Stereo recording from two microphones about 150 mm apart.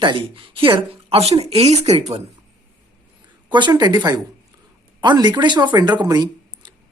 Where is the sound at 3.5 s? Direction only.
30° right (ahead or behind).